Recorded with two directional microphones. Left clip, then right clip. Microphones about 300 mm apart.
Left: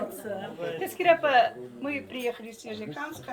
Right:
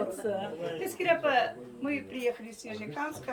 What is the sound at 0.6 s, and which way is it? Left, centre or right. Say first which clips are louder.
Speech: left 3 dB; centre.